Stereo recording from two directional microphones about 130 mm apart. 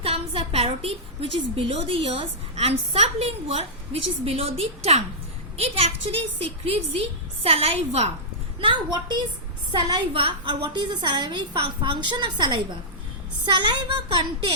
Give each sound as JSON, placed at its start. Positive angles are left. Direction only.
{"t": 0.0, "sound": "a woman's voice", "side_deg": -50}
{"t": 8.6, "sound": "a woman's voice", "side_deg": -35}